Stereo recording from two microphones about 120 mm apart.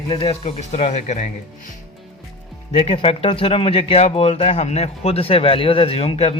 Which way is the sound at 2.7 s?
60° left (ahead or behind).